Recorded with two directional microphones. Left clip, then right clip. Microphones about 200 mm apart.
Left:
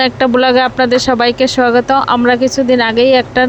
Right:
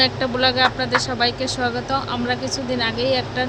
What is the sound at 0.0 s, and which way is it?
Speech, 40° left (ahead or behind).